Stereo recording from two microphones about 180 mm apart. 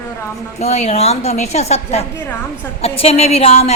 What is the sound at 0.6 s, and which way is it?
A woman's voice, 35° left (ahead or behind).